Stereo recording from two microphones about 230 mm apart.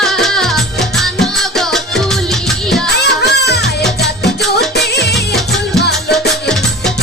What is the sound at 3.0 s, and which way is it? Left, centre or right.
Music, left.